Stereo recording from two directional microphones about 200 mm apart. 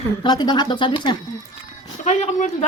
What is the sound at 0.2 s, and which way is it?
Speech, 20° left (ahead or behind).